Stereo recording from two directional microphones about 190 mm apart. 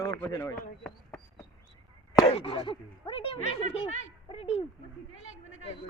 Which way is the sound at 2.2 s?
30° left (ahead or behind).